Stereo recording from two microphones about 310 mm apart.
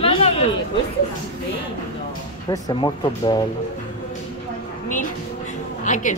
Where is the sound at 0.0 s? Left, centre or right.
Centre.